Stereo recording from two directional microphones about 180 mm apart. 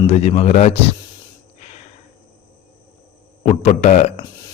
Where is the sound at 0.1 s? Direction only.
35° left (ahead or behind).